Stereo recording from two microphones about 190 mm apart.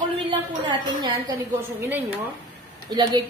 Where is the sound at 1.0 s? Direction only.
20° right (ahead or behind).